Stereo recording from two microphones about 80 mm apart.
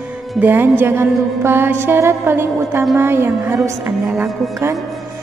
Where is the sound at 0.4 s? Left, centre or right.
Right.